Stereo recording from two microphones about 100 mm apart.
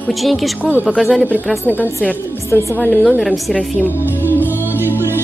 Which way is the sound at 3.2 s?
Centre (ahead or behind).